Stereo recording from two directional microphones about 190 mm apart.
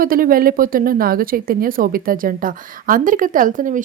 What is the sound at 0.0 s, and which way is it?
A woman's voice, 50° right (ahead or behind).